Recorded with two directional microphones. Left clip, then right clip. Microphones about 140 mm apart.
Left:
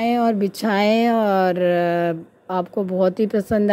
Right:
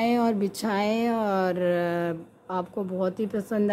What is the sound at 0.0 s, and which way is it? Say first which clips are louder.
A woman's voice: left 5 dB; 25° left (ahead or behind).